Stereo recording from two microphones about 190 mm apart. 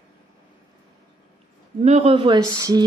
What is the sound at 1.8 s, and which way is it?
Speech, 35° right (ahead or behind).